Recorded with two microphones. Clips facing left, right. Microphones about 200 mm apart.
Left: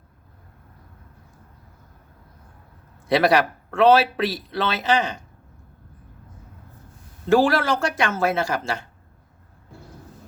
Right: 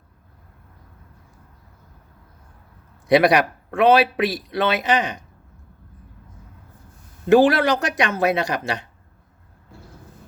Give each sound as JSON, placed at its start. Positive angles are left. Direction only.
{"t": 3.1, "sound": "a man's voice", "side_deg": -15}
{"t": 7.3, "sound": "a man's voice", "side_deg": -20}